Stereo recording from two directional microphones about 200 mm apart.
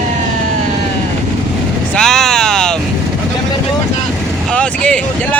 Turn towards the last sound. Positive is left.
turn(degrees=5)  # may be behind; listen again after turning